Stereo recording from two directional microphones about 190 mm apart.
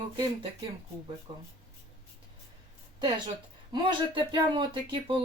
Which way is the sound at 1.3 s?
25° right (ahead or behind).